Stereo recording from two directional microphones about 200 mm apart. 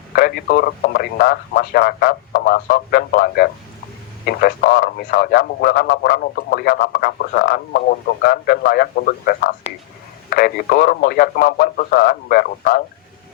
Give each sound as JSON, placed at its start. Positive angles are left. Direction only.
{"t": 0.2, "sound": "a man's voice", "side_deg": 50}